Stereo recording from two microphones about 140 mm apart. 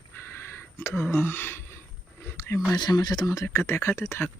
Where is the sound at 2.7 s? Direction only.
30° left (ahead or behind).